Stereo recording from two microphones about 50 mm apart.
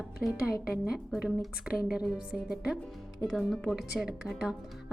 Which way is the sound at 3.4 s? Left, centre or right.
Centre.